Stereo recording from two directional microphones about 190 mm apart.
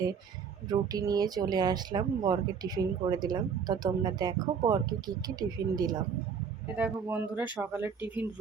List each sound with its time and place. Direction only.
0.7 s speech: 20° right (ahead or behind)
6.7 s speech: 10° right (ahead or behind)